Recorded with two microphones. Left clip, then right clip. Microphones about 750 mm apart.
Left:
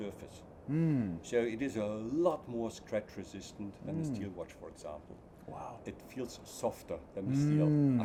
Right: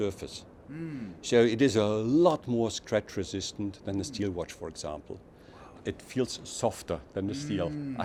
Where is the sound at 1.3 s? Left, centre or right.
Right.